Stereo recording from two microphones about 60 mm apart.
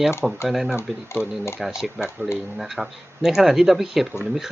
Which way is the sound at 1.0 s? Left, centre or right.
Left.